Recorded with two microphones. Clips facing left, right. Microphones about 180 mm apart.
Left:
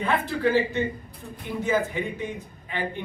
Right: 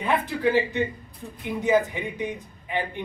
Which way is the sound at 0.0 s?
15° right (ahead or behind).